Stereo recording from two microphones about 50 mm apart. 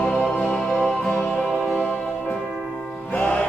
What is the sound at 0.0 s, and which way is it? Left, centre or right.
Music, left.